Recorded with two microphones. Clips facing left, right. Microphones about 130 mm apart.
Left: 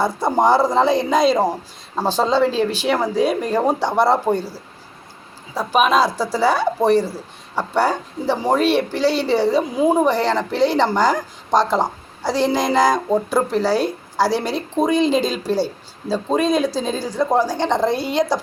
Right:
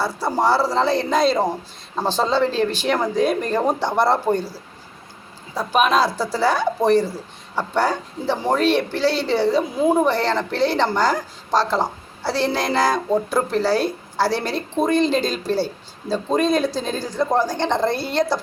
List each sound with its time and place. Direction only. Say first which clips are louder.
0.0 s speech: left 3 dB; 20° left (ahead or behind)